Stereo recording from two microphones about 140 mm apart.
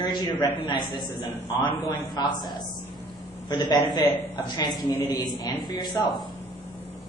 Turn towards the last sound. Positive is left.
turn(degrees=30)  # may be behind; listen again after turning